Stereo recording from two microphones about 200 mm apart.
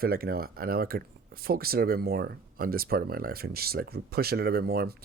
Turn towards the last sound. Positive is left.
turn(degrees=-50)  # may be behind; listen again after turning